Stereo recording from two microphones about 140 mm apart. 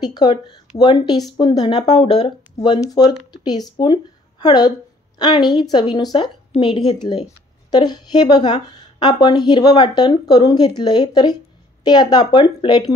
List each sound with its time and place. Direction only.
0.0 s a woman's voice: 30° left (ahead or behind)